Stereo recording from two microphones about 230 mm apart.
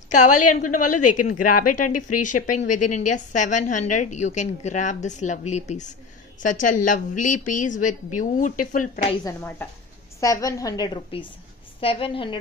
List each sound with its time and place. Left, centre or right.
0.1 s a woman's voice: left
9.2 s a woman's voice: centre